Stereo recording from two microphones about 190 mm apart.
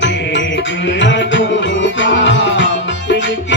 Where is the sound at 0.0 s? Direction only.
70° left (ahead or behind).